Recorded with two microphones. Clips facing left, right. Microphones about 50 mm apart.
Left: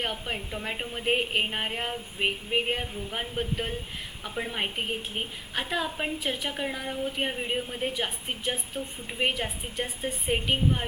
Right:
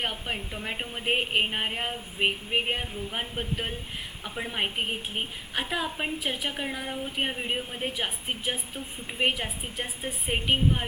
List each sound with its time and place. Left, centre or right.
0.0 s a woman's voice: centre